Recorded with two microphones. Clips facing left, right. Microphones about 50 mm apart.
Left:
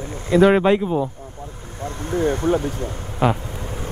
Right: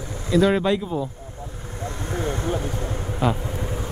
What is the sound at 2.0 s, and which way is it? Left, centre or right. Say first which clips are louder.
Speech: left 7 dB; left.